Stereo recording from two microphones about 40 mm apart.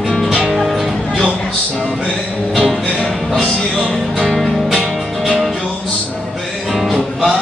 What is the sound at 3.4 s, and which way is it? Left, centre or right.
Music, centre.